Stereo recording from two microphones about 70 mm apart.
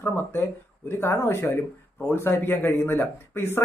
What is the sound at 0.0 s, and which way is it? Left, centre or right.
Speech, left.